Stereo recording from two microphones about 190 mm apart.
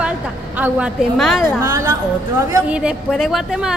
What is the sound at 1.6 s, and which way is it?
Speech, 15° right (ahead or behind).